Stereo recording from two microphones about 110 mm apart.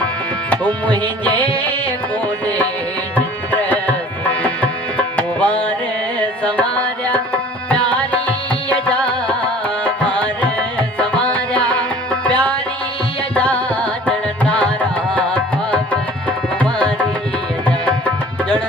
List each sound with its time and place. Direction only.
0.5 s tabla: 15° left (ahead or behind)
3.2 s tabla: 15° left (ahead or behind)
6.1 s carnatic music: 10° left (ahead or behind)
7.7 s music: 10° left (ahead or behind)
9.8 s tabla: 10° left (ahead or behind)
10.9 s music: 10° left (ahead or behind)
16.6 s tabla: 10° left (ahead or behind)